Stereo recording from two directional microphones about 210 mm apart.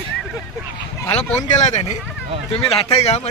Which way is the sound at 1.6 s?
35° left (ahead or behind).